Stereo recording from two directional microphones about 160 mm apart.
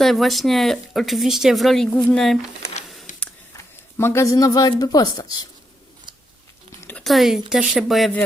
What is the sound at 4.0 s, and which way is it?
Speech, 15° left (ahead or behind).